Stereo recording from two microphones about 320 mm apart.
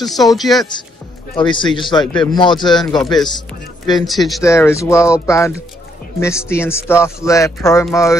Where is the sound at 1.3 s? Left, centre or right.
Centre.